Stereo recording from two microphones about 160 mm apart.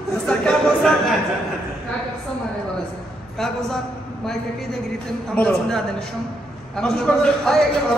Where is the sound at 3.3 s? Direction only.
Centre (ahead or behind).